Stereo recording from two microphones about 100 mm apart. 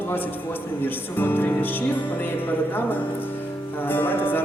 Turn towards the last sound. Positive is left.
turn(degrees=20)  # may be behind; listen again after turning